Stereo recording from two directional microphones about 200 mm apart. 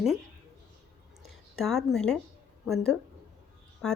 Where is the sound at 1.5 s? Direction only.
Centre (ahead or behind).